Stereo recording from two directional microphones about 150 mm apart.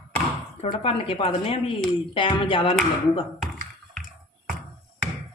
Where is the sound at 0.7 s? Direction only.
40° left (ahead or behind).